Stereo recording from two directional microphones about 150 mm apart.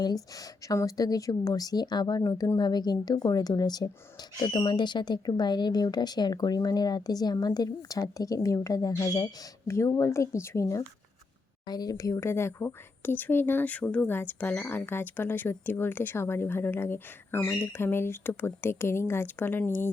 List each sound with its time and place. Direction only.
0.0 s speech: 25° left (ahead or behind)